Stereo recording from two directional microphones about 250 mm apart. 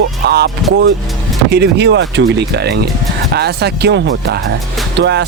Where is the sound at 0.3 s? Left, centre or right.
Right.